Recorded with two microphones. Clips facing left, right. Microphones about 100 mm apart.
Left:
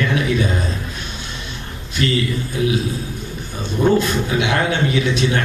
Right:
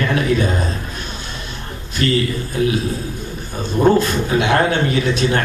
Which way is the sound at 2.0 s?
45° right (ahead or behind).